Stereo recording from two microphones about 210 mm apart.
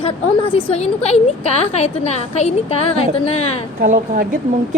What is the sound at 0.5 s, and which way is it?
A woman's voice, 30° left (ahead or behind).